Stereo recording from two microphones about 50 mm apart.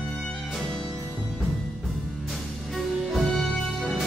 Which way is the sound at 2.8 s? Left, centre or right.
Centre.